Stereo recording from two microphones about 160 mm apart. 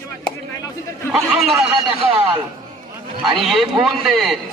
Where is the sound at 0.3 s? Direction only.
20° left (ahead or behind).